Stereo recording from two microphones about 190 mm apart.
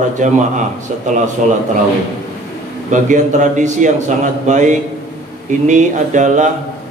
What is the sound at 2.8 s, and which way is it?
A man's voice, 40° right (ahead or behind).